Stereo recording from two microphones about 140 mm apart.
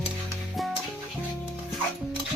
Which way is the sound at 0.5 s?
Centre (ahead or behind).